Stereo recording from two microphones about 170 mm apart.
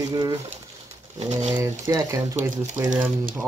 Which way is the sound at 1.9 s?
20° right (ahead or behind).